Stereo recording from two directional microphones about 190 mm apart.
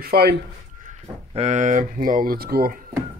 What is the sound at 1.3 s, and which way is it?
Speech, 35° right (ahead or behind).